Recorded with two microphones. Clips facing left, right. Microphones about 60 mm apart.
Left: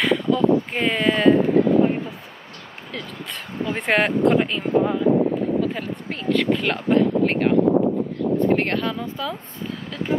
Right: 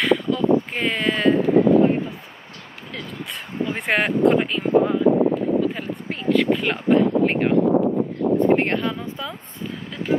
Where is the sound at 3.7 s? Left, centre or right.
Centre.